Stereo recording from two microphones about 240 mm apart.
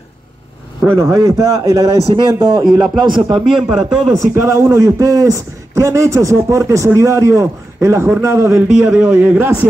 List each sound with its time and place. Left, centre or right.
0.8 s speech: centre
2.6 s a man's voice: centre
3.0 s speech: centre
3.3 s a man's voice: centre
4.3 s a man's voice: centre